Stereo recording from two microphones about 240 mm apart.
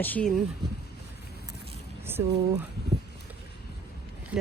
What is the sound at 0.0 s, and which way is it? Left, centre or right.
Speech, centre.